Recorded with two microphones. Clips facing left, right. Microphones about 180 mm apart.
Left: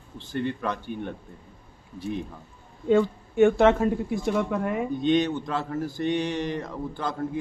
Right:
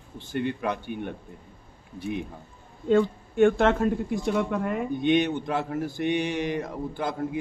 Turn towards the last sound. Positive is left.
turn(degrees=-15)  # may be behind; listen again after turning